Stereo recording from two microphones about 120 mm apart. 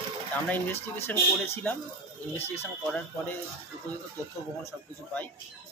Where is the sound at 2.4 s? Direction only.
20° left (ahead or behind).